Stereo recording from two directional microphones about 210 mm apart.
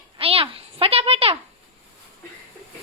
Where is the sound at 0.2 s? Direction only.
25° right (ahead or behind).